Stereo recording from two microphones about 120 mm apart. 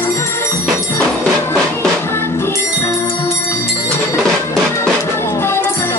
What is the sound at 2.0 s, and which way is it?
Music, 20° left (ahead or behind).